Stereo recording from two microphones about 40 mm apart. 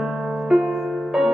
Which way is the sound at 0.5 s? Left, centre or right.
Centre.